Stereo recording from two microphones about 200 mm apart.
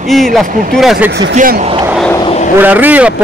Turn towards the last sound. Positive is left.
turn(degrees=-10)  # may be behind; listen again after turning